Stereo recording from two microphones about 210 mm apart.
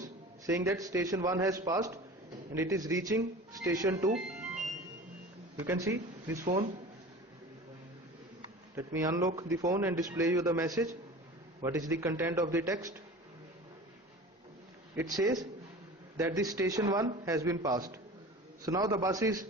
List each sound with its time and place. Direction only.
0.0 s a man's voice: 15° right (ahead or behind)
4.1 s music: 5° right (ahead or behind)
5.5 s speech: 15° right (ahead or behind)
6.4 s a man's voice: 35° right (ahead or behind)
8.7 s speech: 15° right (ahead or behind)
14.9 s speech: 15° right (ahead or behind)